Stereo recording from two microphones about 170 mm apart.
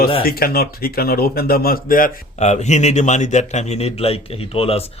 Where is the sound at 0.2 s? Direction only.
60° left (ahead or behind).